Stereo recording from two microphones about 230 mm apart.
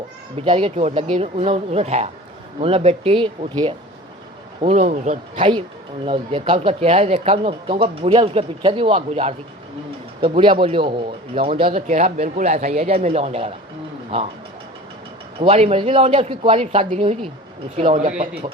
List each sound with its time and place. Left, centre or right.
0.3 s speech: right
4.6 s speech: right
15.4 s speech: right